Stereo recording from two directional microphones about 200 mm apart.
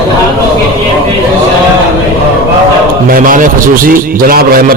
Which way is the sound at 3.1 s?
45° right (ahead or behind).